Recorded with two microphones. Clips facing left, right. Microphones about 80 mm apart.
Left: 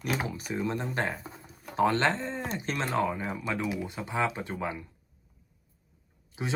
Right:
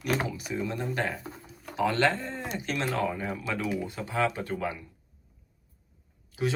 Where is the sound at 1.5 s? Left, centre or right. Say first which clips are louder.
Left 3 dB; left.